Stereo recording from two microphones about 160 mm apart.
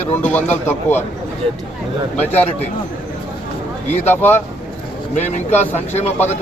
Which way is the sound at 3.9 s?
10° left (ahead or behind).